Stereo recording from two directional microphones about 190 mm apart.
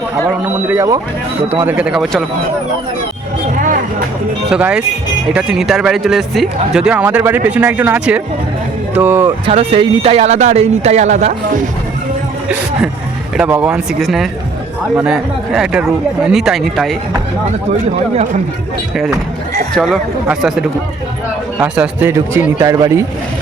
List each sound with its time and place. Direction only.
0.3 s speech: 10° right (ahead or behind)
4.5 s speech: 5° right (ahead or behind)
9.5 s speech: 30° right (ahead or behind)
13.3 s speech: 5° right (ahead or behind)
19.7 s speech: centre (ahead or behind); by 23.0 s 15° right (ahead or behind)